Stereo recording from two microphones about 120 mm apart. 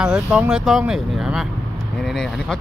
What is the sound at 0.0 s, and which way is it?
Speech, 5° right (ahead or behind).